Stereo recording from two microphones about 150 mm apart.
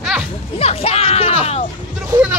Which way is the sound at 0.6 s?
45° left (ahead or behind).